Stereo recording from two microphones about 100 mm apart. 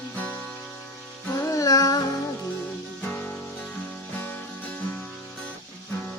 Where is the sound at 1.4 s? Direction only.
35° left (ahead or behind).